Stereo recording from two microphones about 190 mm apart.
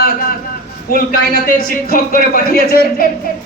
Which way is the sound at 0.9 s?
50° left (ahead or behind).